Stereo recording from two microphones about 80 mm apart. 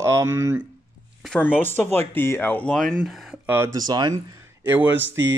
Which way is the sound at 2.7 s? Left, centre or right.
Centre.